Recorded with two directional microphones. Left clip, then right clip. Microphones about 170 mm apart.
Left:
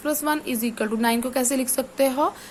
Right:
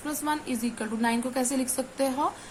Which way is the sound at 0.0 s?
45° left (ahead or behind).